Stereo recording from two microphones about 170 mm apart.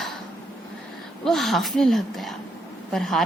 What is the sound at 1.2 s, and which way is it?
A woman's voice, centre (ahead or behind).